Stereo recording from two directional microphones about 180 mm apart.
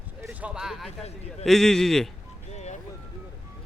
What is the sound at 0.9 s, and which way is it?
Speech, 35° left (ahead or behind).